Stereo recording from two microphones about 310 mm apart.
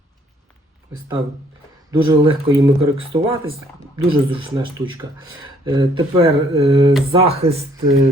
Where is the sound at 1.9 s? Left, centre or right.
Centre.